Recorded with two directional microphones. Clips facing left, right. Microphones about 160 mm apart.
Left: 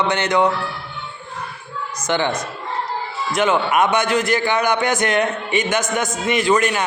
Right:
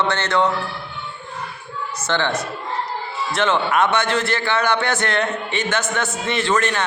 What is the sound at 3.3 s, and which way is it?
A man's voice, 10° left (ahead or behind).